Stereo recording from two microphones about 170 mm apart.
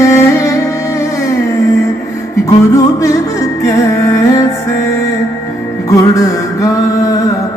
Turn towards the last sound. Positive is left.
turn(degrees=20)  # may be behind; listen again after turning